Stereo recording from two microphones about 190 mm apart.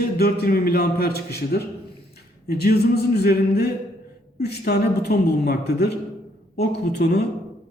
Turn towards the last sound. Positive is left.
turn(degrees=55)  # may be behind; listen again after turning